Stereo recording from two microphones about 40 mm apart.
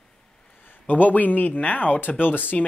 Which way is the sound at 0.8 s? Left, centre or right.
Left.